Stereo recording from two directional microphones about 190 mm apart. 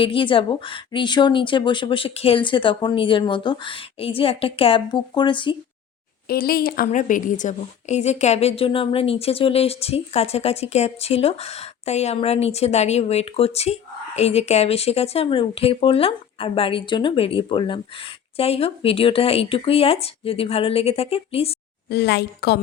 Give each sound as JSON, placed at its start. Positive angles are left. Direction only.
{"t": 0.0, "sound": "a woman's voice", "side_deg": 25}
{"t": 6.2, "sound": "a woman's voice", "side_deg": 50}
{"t": 21.8, "sound": "a woman's voice", "side_deg": 60}